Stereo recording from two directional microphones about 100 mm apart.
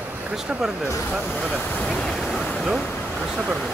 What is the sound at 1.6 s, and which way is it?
Speech, 15° left (ahead or behind).